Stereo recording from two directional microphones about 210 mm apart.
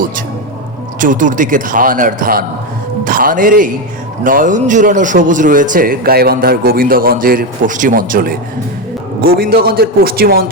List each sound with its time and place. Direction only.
0.9 s a man's voice: 40° right (ahead or behind)